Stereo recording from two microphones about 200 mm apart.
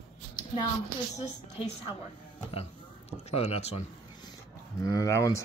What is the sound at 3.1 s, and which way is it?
Speech, 30° left (ahead or behind).